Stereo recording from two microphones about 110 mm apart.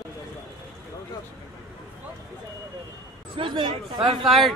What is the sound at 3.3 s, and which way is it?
Speech, 50° right (ahead or behind).